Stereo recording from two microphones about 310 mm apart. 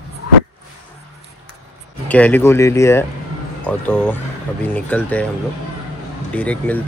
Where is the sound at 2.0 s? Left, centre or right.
Centre.